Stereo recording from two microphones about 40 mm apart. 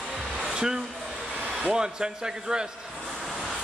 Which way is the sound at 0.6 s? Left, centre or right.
Centre.